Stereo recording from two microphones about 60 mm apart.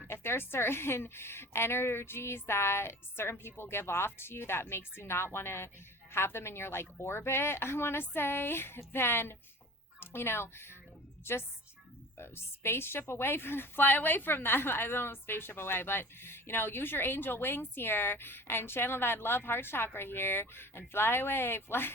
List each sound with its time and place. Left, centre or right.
0.1 s a woman's voice: left
12.1 s a woman's voice: left